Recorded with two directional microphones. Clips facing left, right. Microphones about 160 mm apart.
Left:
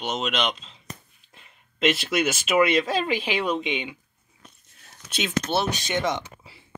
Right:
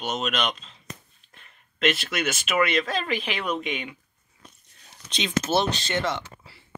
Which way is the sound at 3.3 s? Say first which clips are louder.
Left 3 dB; 30° left (ahead or behind).